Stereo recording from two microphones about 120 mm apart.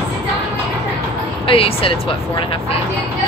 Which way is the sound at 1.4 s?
50° left (ahead or behind).